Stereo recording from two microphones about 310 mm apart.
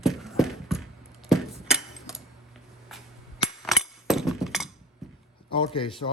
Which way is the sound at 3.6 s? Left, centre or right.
Centre.